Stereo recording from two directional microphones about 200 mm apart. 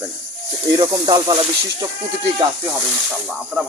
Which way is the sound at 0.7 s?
20° right (ahead or behind).